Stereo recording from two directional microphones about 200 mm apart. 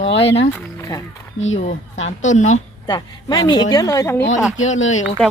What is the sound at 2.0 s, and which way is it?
Speech, 35° left (ahead or behind).